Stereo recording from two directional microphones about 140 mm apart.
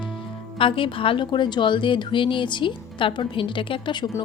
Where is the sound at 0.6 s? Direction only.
40° left (ahead or behind).